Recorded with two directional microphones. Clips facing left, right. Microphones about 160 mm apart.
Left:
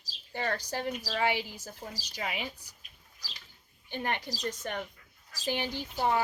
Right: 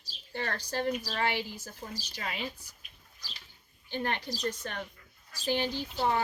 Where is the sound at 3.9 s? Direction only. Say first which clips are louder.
Right 1 dB; 15° left (ahead or behind).